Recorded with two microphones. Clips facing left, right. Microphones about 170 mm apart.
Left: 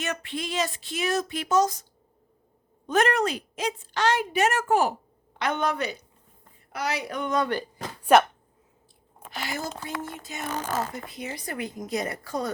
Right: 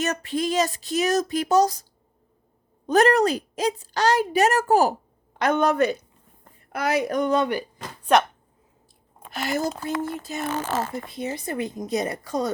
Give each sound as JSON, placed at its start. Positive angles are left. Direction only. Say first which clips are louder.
{"t": 0.0, "sound": "a woman's voice", "louder": "right 7 dB", "side_deg": -40}
{"t": 9.3, "sound": "a woman's voice", "louder": "right 7 dB", "side_deg": -45}